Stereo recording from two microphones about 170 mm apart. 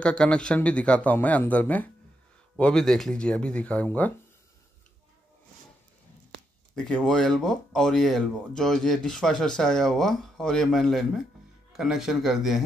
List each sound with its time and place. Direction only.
0.0 s speech: 5° left (ahead or behind)
6.7 s speech: 5° left (ahead or behind)